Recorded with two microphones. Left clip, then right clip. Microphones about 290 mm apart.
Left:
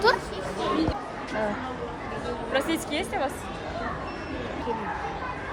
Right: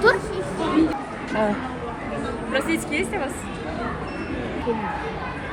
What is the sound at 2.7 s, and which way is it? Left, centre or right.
Speech, left.